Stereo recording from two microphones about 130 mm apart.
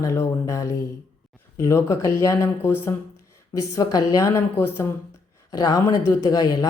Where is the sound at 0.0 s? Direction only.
25° left (ahead or behind).